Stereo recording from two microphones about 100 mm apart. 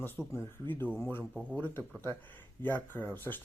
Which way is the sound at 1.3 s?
10° right (ahead or behind).